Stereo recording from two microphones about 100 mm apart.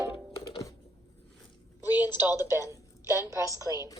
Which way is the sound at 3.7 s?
40° left (ahead or behind).